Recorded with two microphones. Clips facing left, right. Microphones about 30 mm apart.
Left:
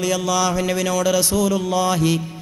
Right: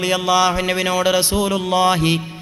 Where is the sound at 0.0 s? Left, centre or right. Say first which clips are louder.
Right 4 dB; right.